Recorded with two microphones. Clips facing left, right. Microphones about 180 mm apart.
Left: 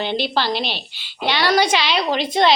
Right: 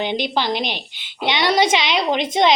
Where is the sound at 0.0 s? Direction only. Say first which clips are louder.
Even; 15° right (ahead or behind).